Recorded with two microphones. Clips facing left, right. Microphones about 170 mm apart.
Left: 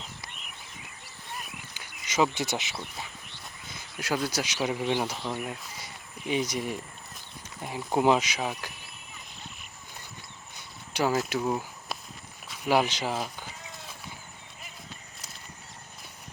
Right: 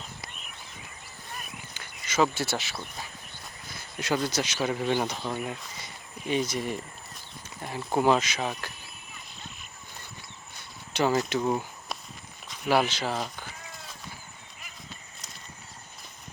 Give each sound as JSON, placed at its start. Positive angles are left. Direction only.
{"t": 1.7, "sound": "a sound", "side_deg": 15}
{"t": 3.9, "sound": "speech", "side_deg": 5}
{"t": 10.9, "sound": "speech", "side_deg": 5}
{"t": 12.5, "sound": "speech", "side_deg": 15}